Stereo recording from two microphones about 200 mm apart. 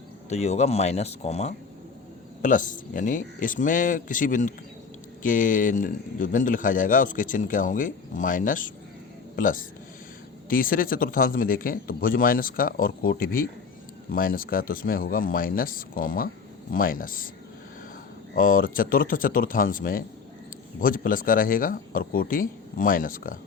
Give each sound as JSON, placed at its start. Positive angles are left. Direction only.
{"t": 0.3, "sound": "a man's voice", "side_deg": 30}
{"t": 18.3, "sound": "speech", "side_deg": 45}